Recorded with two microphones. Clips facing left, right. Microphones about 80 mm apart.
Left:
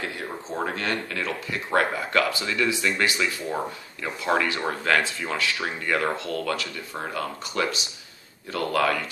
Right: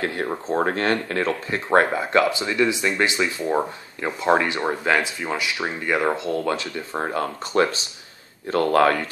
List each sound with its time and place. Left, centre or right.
0.0 s speech: right
7.0 s speech: right